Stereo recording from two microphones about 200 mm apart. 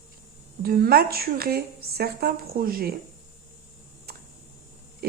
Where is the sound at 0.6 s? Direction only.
50° right (ahead or behind).